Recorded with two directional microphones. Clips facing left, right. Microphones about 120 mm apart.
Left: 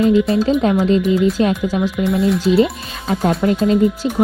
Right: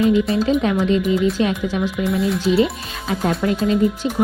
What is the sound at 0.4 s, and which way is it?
Speech, 35° left (ahead or behind).